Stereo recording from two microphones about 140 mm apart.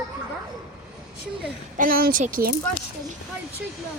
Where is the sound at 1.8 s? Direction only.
90° right.